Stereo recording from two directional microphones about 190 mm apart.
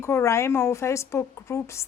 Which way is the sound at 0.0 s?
15° left (ahead or behind).